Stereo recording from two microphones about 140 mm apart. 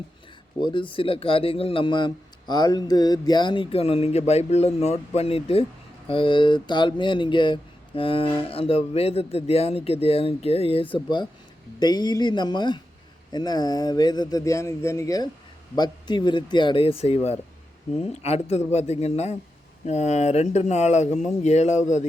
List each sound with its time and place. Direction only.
0.6 s a man's voice: 35° left (ahead or behind); by 22.0 s 55° left (ahead or behind)